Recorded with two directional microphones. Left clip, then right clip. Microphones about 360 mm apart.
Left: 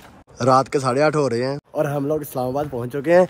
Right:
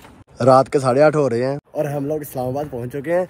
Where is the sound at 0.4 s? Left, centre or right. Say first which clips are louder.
Right 3 dB; centre.